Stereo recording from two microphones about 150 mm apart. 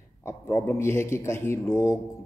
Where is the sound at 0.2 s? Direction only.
15° left (ahead or behind).